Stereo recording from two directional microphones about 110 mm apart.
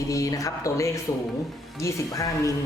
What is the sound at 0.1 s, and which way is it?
Speech, 30° left (ahead or behind).